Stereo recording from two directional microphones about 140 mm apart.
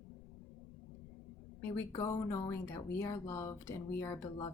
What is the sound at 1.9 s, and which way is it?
Speech, 25° left (ahead or behind).